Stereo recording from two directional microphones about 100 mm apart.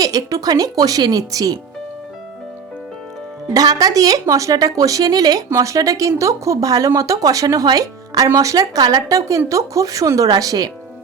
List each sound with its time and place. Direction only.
0.0 s speech: 35° right (ahead or behind)
3.5 s speech: 40° right (ahead or behind)